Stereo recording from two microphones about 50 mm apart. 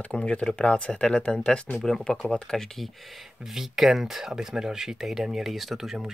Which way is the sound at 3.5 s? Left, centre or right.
Centre.